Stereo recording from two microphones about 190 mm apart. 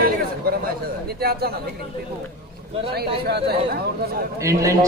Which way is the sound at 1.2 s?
55° right (ahead or behind).